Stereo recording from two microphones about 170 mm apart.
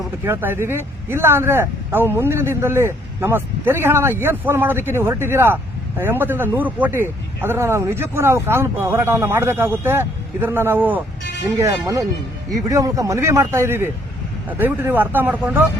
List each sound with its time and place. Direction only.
0.3 s speech: 15° right (ahead or behind)